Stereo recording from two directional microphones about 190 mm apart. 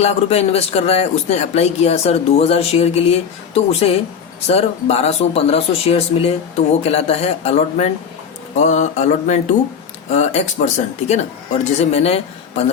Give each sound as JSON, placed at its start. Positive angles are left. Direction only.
{"t": 0.0, "sound": "speech", "side_deg": 35}